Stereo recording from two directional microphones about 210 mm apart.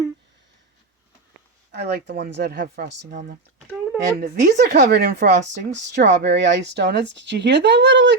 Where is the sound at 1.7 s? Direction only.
50° right (ahead or behind).